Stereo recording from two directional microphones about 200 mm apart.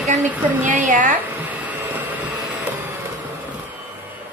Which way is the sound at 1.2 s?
10° right (ahead or behind).